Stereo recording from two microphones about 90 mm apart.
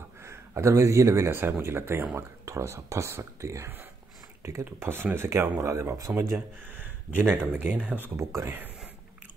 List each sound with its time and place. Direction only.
0.2 s speech: 30° right (ahead or behind)
4.7 s speech: 25° right (ahead or behind)